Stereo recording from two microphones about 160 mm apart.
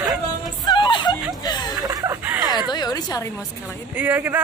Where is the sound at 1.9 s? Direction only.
25° right (ahead or behind).